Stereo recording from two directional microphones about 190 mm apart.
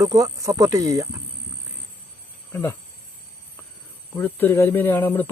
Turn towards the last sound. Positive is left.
turn(degrees=10)  # may be behind; listen again after turning